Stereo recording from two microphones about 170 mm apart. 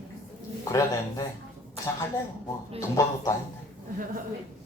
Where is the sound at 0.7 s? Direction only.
20° left (ahead or behind).